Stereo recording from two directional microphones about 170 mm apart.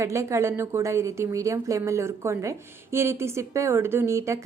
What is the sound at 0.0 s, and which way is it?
A woman's voice, 15° right (ahead or behind).